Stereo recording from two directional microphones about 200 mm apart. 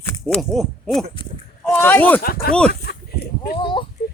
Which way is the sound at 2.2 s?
45° left (ahead or behind).